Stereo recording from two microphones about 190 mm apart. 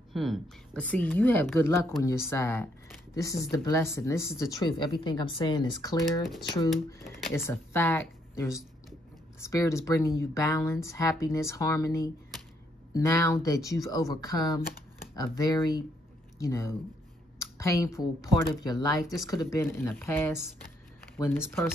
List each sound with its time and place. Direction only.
0.1 s speech: centre (ahead or behind); by 5.9 s 20° left (ahead or behind)
7.3 s speech: 15° left (ahead or behind)
17.4 s a sound: 15° left (ahead or behind)
18.4 s speech: 20° left (ahead or behind)